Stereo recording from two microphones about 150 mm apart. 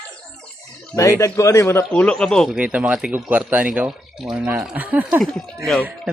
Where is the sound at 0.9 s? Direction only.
20° left (ahead or behind); by 2.5 s 5° left (ahead or behind).